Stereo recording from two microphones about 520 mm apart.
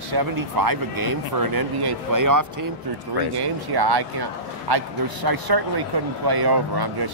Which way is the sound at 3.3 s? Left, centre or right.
Right.